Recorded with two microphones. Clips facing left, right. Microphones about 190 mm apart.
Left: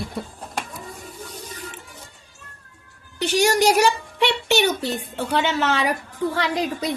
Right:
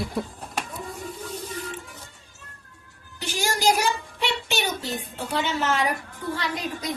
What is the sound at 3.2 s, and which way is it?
A woman's voice, 70° left (ahead or behind).